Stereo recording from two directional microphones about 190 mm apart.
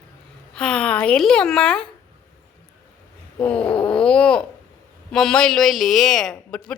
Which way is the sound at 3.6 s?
25° left (ahead or behind).